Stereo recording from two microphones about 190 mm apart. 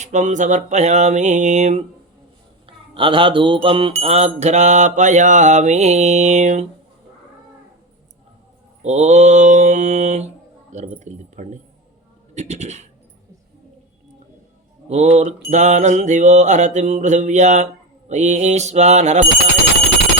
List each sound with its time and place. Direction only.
0.0 s mantra: 40° right (ahead or behind)
2.6 s a sound: 25° right (ahead or behind)
4.0 s mantra: 35° right (ahead or behind)
8.8 s mantra: 35° right (ahead or behind)
11.0 s speech: 40° right (ahead or behind)
14.8 s mantra: 35° right (ahead or behind)